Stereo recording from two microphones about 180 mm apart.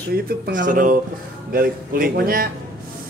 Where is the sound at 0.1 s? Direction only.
50° right (ahead or behind).